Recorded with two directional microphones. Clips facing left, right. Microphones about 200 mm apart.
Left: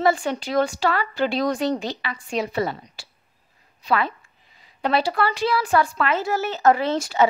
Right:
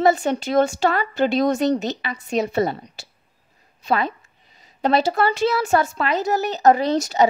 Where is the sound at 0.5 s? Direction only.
25° right (ahead or behind).